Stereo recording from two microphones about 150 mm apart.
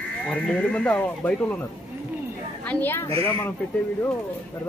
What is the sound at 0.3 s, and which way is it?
Speech, 10° left (ahead or behind).